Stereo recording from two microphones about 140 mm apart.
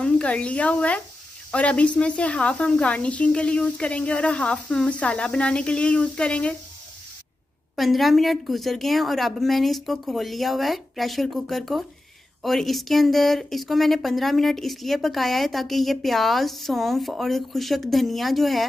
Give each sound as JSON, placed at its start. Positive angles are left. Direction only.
{"t": 0.0, "sound": "a woman's voice", "side_deg": 10}
{"t": 7.7, "sound": "speech", "side_deg": 0}